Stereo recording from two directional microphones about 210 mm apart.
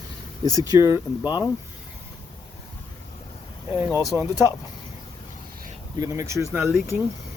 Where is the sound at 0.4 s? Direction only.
15° right (ahead or behind).